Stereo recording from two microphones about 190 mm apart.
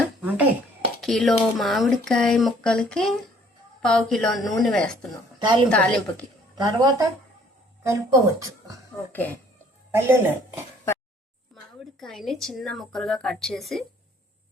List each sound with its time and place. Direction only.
0.0 s a sound: 5° right (ahead or behind)
1.0 s speech: centre (ahead or behind)
5.4 s a woman's voice: 25° right (ahead or behind)
5.6 s speech: 5° left (ahead or behind)
6.6 s a woman's voice: 20° right (ahead or behind)
9.9 s speech: 15° right (ahead or behind)
11.9 s speech: centre (ahead or behind)